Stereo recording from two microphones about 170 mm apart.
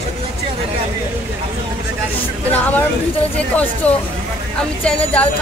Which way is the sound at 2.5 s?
10° left (ahead or behind).